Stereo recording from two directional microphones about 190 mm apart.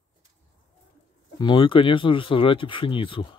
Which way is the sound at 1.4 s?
25° left (ahead or behind).